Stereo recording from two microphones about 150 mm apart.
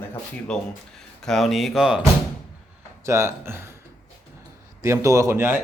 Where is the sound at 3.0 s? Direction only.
20° right (ahead or behind).